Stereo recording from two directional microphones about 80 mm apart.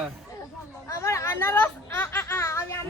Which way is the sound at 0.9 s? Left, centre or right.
Left.